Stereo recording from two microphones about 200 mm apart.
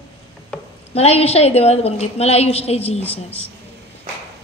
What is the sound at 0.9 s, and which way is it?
A woman's voice, 30° left (ahead or behind).